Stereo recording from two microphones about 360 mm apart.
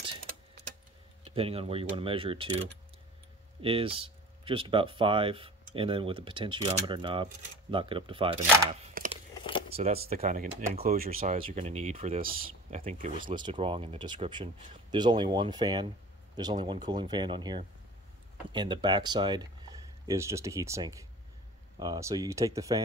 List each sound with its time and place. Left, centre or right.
1.3 s speech: centre
3.6 s speech: centre
9.4 s a sound: centre
9.7 s speech: right